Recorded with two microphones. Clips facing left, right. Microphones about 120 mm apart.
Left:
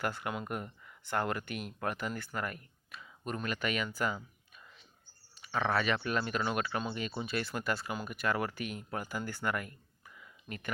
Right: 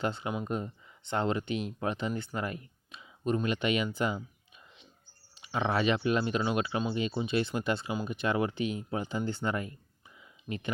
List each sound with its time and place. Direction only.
0.0 s speech: 20° right (ahead or behind)
5.5 s speech: 15° right (ahead or behind)